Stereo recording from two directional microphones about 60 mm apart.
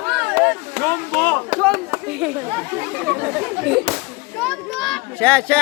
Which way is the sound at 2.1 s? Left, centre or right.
Centre.